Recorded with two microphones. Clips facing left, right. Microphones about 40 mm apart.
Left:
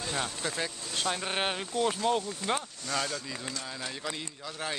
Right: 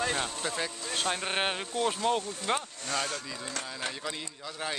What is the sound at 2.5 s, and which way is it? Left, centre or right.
Speech, right.